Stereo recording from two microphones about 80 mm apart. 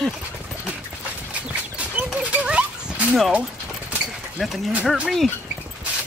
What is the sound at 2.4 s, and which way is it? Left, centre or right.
Dog, centre.